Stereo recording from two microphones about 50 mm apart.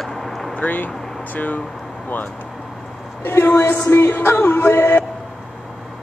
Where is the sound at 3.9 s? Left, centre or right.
Left.